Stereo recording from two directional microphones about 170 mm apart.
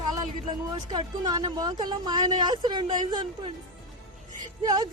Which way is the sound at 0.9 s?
25° right (ahead or behind).